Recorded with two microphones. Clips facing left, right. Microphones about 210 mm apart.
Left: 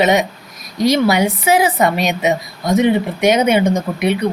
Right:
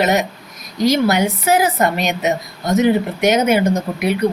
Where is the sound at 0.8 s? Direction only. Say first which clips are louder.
Left 1 dB; 70° left (ahead or behind).